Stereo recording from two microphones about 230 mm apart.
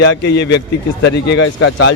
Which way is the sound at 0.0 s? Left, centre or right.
Left.